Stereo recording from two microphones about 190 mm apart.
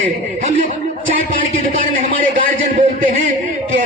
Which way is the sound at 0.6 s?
45° right (ahead or behind).